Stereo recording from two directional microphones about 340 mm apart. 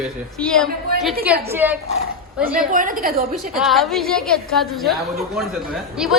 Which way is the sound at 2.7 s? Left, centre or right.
Right.